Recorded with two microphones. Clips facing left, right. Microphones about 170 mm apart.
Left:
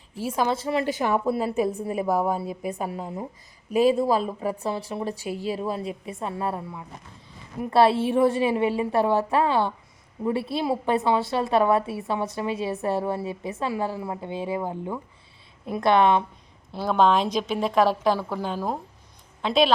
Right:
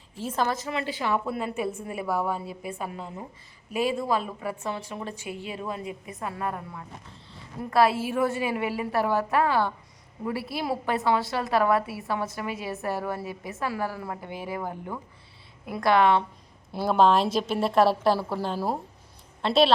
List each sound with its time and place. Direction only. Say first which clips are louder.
0.2 s a woman's voice: left 3 dB; 10° left (ahead or behind)
0.6 s a woman's voice: left 5 dB; 40° left (ahead or behind)
7.7 s a woman's voice: left 3 dB; 30° left (ahead or behind)
16.7 s a woman's voice: even; 5° right (ahead or behind)